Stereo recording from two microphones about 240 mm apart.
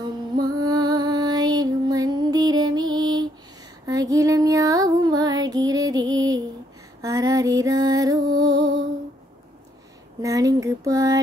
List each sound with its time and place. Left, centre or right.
0.0 s music: centre
3.8 s female singing: centre
7.0 s music: centre
10.2 s a sound: centre